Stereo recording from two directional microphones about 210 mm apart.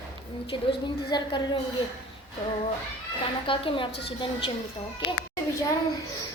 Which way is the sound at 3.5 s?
25° left (ahead or behind).